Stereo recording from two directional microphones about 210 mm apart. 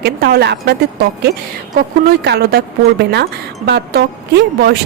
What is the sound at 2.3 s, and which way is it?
Speech, 50° right (ahead or behind).